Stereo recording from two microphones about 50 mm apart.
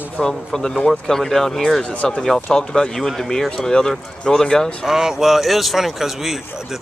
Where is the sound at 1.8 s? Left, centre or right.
Left.